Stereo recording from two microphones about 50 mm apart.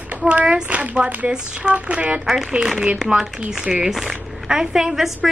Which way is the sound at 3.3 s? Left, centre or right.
Centre.